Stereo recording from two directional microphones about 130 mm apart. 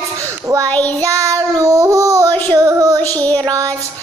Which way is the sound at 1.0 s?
25° right (ahead or behind).